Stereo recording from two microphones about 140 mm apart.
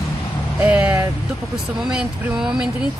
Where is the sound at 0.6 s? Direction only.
10° right (ahead or behind).